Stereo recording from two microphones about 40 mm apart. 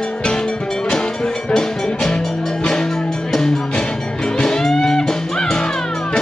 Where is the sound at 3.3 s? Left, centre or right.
Centre.